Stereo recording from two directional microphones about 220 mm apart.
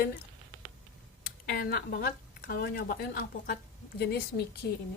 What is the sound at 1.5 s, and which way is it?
A woman's voice, 45° left (ahead or behind).